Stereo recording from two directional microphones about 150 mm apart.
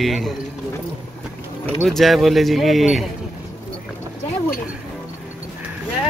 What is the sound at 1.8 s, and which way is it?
Speech, centre (ahead or behind).